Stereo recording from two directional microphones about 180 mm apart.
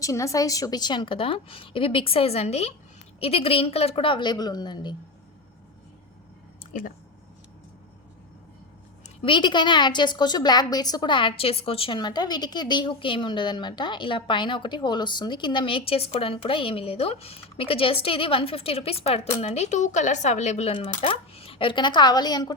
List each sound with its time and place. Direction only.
0.0 s a woman's voice: 15° left (ahead or behind)
9.0 s a woman's voice: 30° left (ahead or behind)